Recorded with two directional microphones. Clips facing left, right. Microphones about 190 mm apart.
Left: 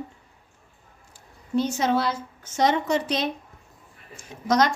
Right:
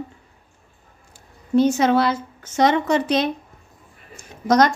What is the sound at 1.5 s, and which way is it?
A woman's voice, 65° right (ahead or behind).